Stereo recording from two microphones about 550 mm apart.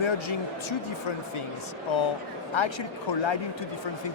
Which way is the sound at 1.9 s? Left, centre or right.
Left.